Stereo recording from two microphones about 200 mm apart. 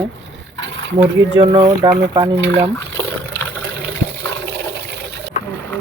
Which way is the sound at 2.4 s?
70° right (ahead or behind).